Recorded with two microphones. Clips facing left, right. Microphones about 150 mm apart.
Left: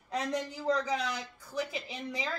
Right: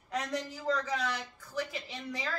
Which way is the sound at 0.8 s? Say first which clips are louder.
Left 1 dB; 10° left (ahead or behind).